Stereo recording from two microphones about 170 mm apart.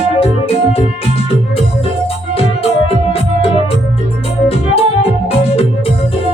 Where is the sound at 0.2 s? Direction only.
35° left (ahead or behind).